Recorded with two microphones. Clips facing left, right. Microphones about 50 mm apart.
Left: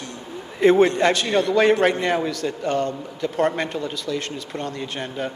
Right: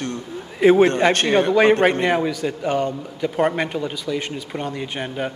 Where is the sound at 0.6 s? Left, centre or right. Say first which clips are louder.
Right 2 dB; centre.